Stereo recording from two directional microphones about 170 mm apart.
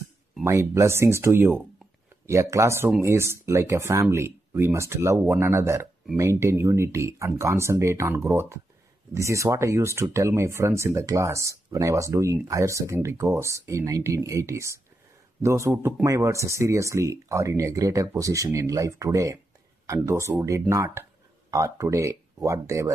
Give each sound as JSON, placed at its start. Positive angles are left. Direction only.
{"t": 0.4, "sound": "speech", "side_deg": -15}